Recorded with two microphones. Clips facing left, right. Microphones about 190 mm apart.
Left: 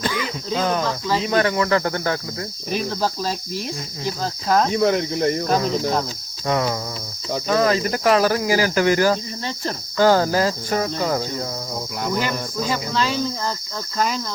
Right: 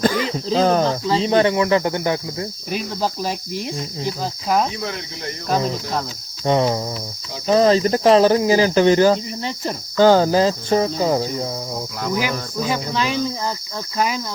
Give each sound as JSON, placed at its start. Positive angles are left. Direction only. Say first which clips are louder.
{"t": 0.0, "sound": "speech", "louder": "right 6 dB", "side_deg": -35}
{"t": 4.7, "sound": "speech", "louder": "left 10 dB", "side_deg": 55}
{"t": 6.4, "sound": "speech", "louder": "right 4 dB", "side_deg": -30}
{"t": 12.1, "sound": "cricket", "louder": "right 2 dB", "side_deg": -10}